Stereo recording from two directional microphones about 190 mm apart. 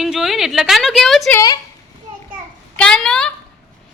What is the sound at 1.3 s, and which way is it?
Speech, 20° left (ahead or behind).